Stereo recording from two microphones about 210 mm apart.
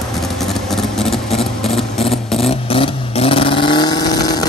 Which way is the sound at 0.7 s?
Centre (ahead or behind).